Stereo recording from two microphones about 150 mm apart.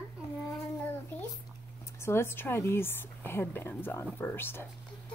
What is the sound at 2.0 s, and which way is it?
Speech, 15° left (ahead or behind).